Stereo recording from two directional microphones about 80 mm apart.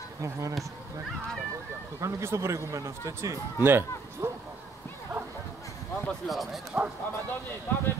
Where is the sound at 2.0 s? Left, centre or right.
Right.